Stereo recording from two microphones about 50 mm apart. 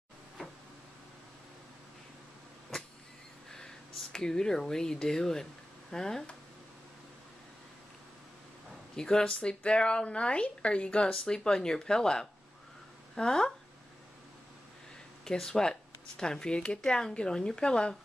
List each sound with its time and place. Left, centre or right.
3.5 s speech: centre
8.9 s speech: centre
15.2 s speech: centre